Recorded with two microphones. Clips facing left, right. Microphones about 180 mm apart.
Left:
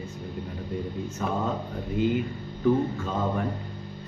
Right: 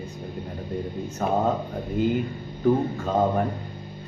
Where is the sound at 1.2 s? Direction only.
45° right (ahead or behind).